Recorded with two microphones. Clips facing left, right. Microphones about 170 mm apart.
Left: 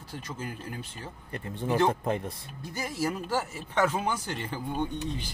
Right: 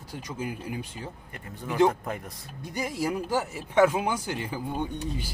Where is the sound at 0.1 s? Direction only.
10° right (ahead or behind).